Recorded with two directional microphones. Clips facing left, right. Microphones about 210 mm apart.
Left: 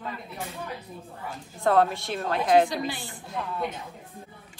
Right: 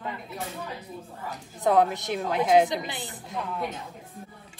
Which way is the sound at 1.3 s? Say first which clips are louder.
Even; 20° right (ahead or behind).